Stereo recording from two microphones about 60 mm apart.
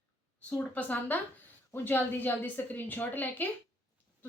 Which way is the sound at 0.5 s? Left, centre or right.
Left.